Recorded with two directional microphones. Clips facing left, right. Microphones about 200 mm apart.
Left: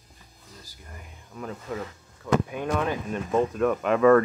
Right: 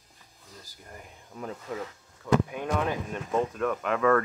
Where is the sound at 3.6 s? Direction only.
15° left (ahead or behind).